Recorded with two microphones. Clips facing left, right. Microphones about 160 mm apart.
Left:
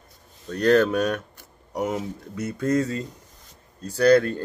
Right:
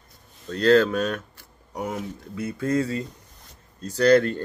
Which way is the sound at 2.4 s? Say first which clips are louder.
Left 1 dB; 20° right (ahead or behind).